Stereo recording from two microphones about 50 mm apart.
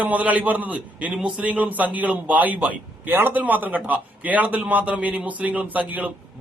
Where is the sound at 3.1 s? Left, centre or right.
Right.